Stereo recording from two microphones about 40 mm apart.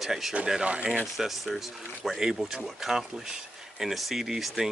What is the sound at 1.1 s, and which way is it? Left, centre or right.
Speech, centre.